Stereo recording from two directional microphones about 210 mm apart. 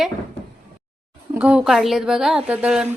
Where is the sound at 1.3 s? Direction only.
5° right (ahead or behind).